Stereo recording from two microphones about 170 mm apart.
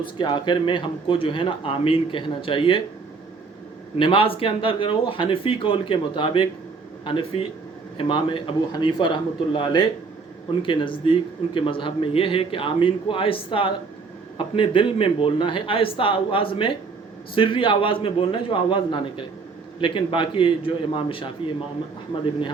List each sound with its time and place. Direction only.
0.2 s a man's voice: 25° left (ahead or behind)
3.9 s a man's voice: 30° left (ahead or behind)